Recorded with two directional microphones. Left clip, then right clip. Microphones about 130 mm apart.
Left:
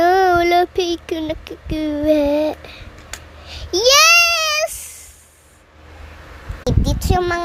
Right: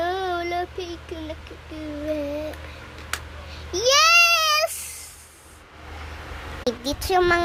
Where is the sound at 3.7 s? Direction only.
35° left (ahead or behind); by 4.8 s 15° left (ahead or behind).